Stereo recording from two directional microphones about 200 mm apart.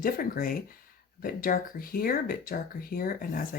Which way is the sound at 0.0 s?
45° left (ahead or behind).